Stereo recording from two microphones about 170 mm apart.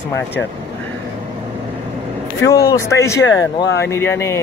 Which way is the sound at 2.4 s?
20° left (ahead or behind).